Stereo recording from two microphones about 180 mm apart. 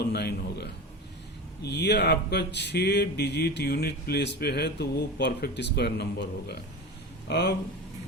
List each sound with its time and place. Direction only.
0.0 s a man's voice: 65° left (ahead or behind)